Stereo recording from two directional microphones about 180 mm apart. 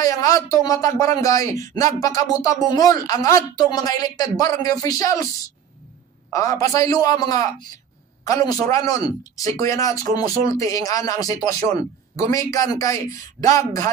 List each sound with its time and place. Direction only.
0.0 s speech: 20° left (ahead or behind)
6.3 s a man's voice: 20° left (ahead or behind)